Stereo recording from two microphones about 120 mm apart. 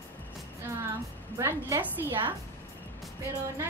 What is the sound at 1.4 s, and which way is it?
Speech, 25° right (ahead or behind).